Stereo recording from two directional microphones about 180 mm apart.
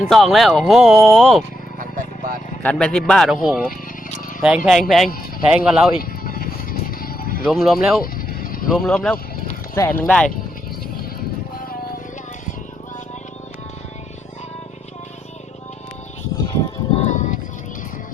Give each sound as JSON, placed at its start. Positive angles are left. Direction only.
{"t": 0.1, "sound": "speech", "side_deg": 0}
{"t": 2.6, "sound": "speech", "side_deg": 5}
{"t": 6.0, "sound": "music", "side_deg": 55}
{"t": 7.4, "sound": "speech", "side_deg": 0}
{"t": 8.0, "sound": "vehicle", "side_deg": 55}
{"t": 8.7, "sound": "speech", "side_deg": 5}
{"t": 16.4, "sound": "music", "side_deg": 20}
{"t": 16.9, "sound": "music", "side_deg": 40}